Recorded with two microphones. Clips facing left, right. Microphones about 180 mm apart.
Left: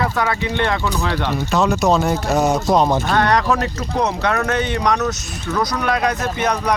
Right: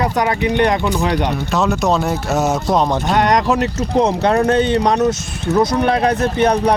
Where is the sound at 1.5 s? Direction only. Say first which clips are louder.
Left 1 dB; centre (ahead or behind).